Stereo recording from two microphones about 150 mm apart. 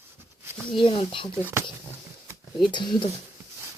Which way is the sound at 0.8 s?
35° left (ahead or behind).